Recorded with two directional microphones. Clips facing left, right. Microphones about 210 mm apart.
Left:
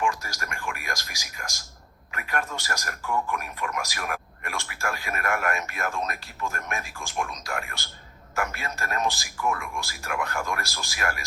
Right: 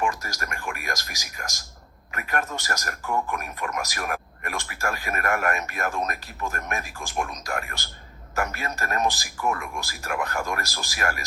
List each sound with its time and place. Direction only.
0.0 s a man's voice: 45° right (ahead or behind)